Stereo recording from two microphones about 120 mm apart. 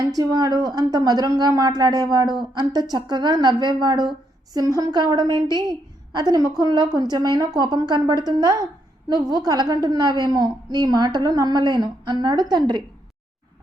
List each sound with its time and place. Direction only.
0.0 s a woman's voice: 30° right (ahead or behind)